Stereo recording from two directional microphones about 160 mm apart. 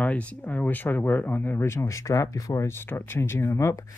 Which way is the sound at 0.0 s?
10° left (ahead or behind).